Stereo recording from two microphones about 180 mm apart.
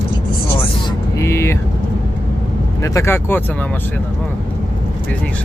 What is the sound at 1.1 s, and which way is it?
Speech, 15° left (ahead or behind).